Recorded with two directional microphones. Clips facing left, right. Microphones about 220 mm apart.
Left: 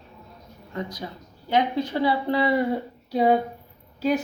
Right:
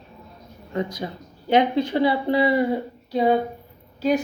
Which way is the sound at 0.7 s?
20° right (ahead or behind).